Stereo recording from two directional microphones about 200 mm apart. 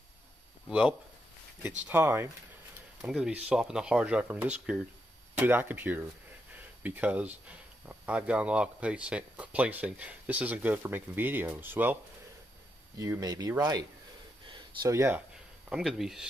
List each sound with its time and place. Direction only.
0.7 s speech: 5° right (ahead or behind)
14.4 s a sound: 25° right (ahead or behind)
15.7 s speech: centre (ahead or behind)